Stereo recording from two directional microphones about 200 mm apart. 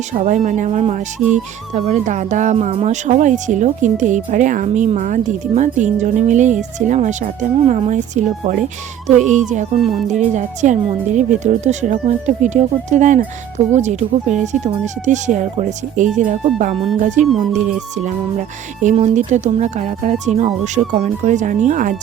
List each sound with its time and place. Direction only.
0.1 s speech: 40° right (ahead or behind)
10.0 s speech: centre (ahead or behind)
10.3 s speech: 35° right (ahead or behind)